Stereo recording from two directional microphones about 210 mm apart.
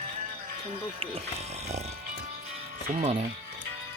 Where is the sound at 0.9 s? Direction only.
30° right (ahead or behind).